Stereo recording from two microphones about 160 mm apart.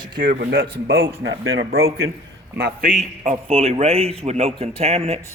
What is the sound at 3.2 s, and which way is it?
A man's voice, 45° right (ahead or behind).